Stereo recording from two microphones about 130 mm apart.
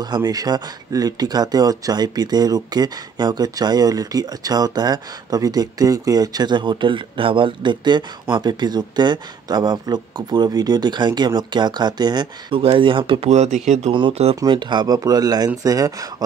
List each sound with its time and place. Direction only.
0.0 s speech: 30° right (ahead or behind)
13.3 s speech: 60° right (ahead or behind)
13.9 s speech: 45° right (ahead or behind)
14.3 s speech: 30° right (ahead or behind)